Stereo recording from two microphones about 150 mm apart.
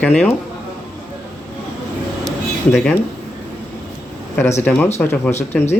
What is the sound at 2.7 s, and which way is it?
Speech, 5° left (ahead or behind).